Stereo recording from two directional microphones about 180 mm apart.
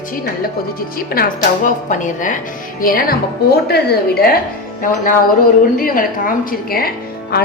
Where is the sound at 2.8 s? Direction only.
55° left (ahead or behind).